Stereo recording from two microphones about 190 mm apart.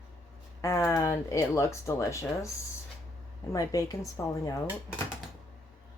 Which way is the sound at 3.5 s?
20° left (ahead or behind).